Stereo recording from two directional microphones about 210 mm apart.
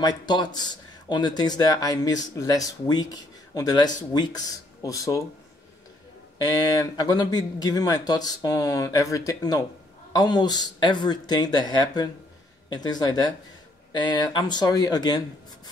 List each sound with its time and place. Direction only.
0.0 s speech: 20° left (ahead or behind)
6.3 s speech: 15° left (ahead or behind)